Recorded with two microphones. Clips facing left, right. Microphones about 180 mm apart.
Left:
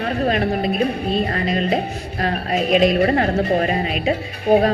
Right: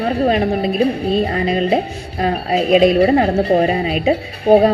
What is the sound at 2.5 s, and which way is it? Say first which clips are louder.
A woman's voice: right 4 dB; 30° right (ahead or behind).